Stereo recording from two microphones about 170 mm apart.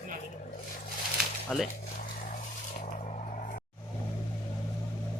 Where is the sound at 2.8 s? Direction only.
40° left (ahead or behind).